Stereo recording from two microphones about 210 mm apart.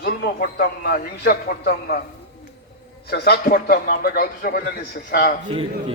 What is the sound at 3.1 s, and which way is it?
A man's voice, 50° left (ahead or behind).